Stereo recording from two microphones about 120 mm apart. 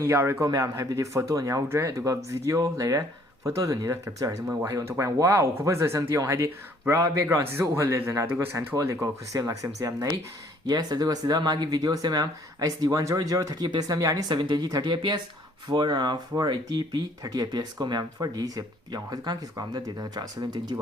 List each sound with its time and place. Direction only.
0.0 s speech: 20° right (ahead or behind)